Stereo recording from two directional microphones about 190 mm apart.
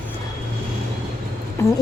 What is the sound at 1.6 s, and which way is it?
Speech, 15° left (ahead or behind).